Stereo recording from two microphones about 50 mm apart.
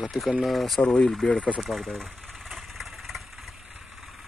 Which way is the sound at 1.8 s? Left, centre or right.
Centre.